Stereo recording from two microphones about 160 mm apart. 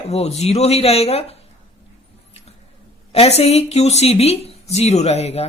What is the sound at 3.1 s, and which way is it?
Speech, 40° left (ahead or behind).